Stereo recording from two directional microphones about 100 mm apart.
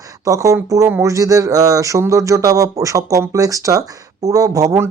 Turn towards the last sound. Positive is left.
turn(degrees=-30)  # may be behind; listen again after turning